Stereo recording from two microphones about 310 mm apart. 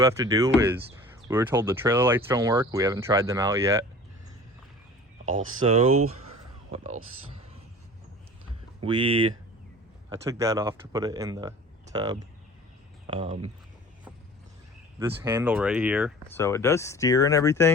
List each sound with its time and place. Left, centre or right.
0.0 s speech: centre
5.2 s speech: right
5.6 s speech: centre
8.8 s speech: centre
14.9 s speech: centre
16.4 s speech: centre